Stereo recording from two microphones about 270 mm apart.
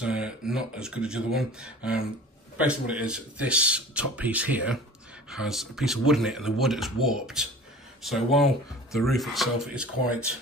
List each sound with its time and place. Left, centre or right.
0.0 s speech: centre